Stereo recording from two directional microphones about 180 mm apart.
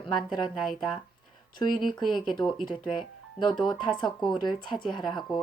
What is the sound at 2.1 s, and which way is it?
Speech, 25° left (ahead or behind).